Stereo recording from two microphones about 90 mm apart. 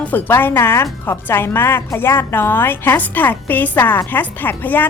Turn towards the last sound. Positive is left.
turn(degrees=20)  # may be behind; listen again after turning